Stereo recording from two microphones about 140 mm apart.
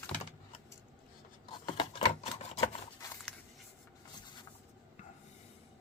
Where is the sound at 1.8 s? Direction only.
50° left (ahead or behind).